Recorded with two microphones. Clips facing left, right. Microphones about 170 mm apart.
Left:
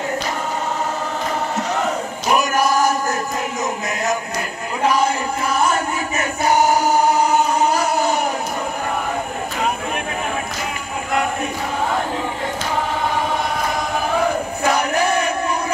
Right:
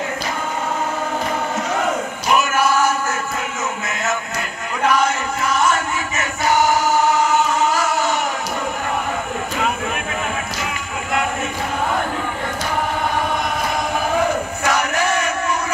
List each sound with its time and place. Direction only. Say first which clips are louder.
2.2 s music: even; 35° left (ahead or behind)
5.6 s a sound: left 1 dB; 35° left (ahead or behind)
7.2 s music: left 1 dB; 35° left (ahead or behind)
14.6 s crowd: left 3 dB; 35° left (ahead or behind)